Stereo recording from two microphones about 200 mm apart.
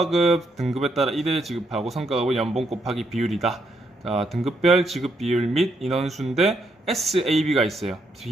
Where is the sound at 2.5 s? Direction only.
30° right (ahead or behind).